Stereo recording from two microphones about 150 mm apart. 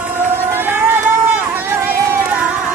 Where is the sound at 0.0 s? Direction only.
15° right (ahead or behind).